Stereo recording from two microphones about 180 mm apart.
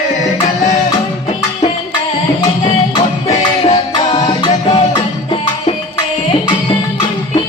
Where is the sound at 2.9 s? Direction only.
35° left (ahead or behind).